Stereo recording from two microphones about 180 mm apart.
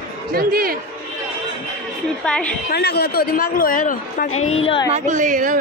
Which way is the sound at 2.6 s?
65° left (ahead or behind).